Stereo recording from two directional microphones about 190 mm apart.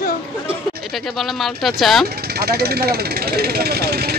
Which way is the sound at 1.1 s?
Centre (ahead or behind).